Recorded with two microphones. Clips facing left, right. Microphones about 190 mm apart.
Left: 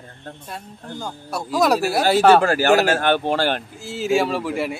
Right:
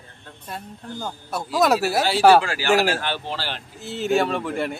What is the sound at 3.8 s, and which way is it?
Speech, centre (ahead or behind).